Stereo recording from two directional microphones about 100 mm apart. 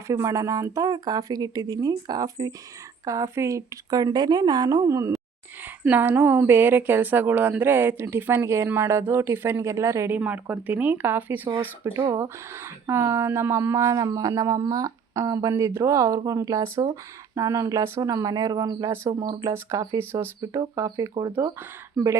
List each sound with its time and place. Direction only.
0.1 s speech: 30° right (ahead or behind)
5.8 s a woman's voice: 20° right (ahead or behind)
10.2 s speech: 15° right (ahead or behind)
11.8 s speech: 30° right (ahead or behind)